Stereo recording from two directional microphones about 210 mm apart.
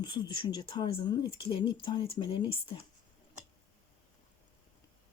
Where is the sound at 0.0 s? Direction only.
20° left (ahead or behind).